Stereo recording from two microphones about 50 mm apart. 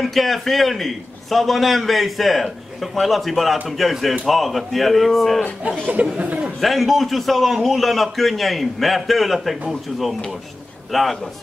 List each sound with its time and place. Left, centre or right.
0.0 s a man's voice: centre
5.9 s speech: right
6.6 s a man's voice: centre